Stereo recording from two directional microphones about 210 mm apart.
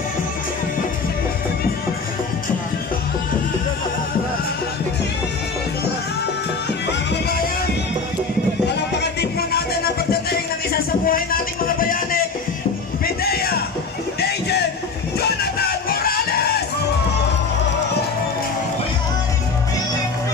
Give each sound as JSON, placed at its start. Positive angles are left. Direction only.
{"t": 6.9, "sound": "music", "side_deg": 55}
{"t": 8.6, "sound": "music", "side_deg": 55}
{"t": 15.1, "sound": "music", "side_deg": 50}